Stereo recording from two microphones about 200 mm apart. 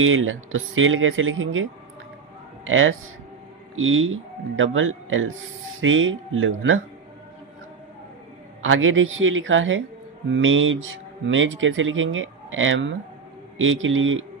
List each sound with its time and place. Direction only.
0.0 s speech: 80° right
2.6 s speech: 80° right
8.6 s speech: 85° right